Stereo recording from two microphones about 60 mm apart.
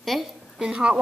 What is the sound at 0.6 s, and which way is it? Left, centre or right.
Speech, centre.